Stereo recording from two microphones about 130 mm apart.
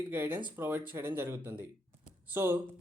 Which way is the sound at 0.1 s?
15° right (ahead or behind).